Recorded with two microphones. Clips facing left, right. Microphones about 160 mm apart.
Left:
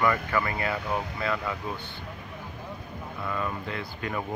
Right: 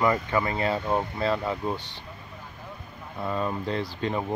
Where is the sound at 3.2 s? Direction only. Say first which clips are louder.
Right 4 dB; 30° right (ahead or behind).